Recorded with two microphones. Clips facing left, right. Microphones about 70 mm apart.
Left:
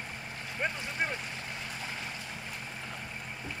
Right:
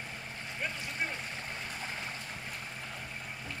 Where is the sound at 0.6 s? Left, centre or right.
Left.